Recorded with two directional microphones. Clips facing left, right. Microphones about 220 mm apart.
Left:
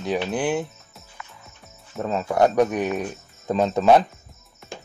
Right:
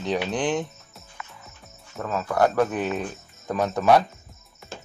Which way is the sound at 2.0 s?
25° left (ahead or behind).